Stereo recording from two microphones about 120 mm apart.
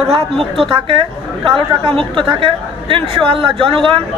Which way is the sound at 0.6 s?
45° right (ahead or behind).